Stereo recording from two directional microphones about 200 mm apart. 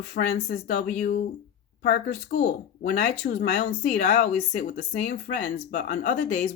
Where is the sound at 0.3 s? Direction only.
60° left (ahead or behind).